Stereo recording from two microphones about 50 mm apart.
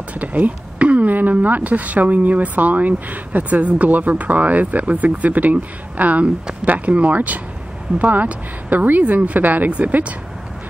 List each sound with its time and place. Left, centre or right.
0.1 s speech: right